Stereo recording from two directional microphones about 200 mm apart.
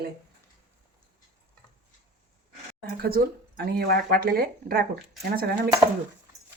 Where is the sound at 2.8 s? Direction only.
50° right (ahead or behind).